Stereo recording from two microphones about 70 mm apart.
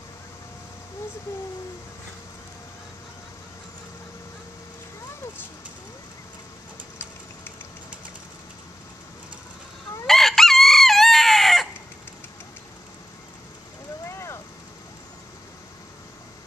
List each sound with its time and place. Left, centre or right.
10.0 s chicken: centre
14.0 s vehicle: left